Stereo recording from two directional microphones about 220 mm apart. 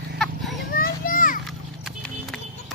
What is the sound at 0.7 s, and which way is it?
Children playing, 40° left (ahead or behind).